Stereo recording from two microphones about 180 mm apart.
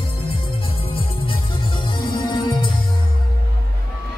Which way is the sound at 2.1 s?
25° left (ahead or behind).